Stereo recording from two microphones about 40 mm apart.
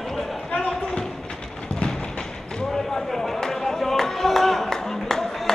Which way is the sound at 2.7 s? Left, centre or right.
Centre.